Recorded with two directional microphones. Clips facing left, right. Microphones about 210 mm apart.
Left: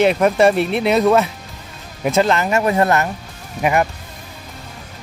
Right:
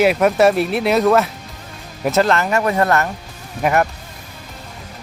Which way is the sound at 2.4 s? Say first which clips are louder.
Left 1 dB; 20° left (ahead or behind).